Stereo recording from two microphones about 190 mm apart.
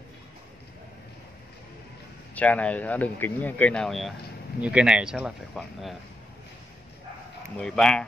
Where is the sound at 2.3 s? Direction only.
5° left (ahead or behind).